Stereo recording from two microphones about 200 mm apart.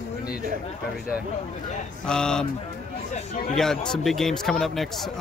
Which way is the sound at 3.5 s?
5° left (ahead or behind).